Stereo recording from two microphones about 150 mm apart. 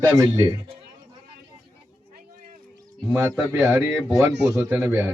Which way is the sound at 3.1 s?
20° right (ahead or behind).